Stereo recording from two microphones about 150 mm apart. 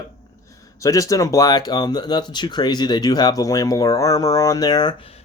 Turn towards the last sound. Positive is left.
turn(degrees=40)  # may be behind; listen again after turning